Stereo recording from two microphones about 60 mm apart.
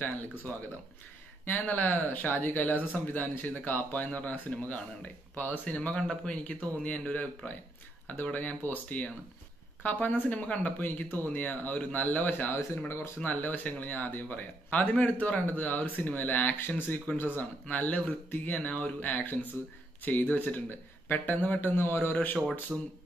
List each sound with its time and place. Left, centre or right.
1.4 s speech: left
5.8 s speech: centre; by 12.5 s left
12.5 s speech: left
13.2 s speech: left
21.7 s speech: left
22.7 s speech: centre